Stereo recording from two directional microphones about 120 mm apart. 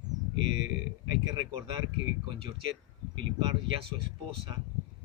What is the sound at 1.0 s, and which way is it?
Speech, 35° right (ahead or behind).